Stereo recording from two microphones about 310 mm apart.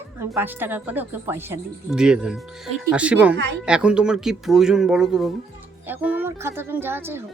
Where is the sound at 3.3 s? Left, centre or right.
Right.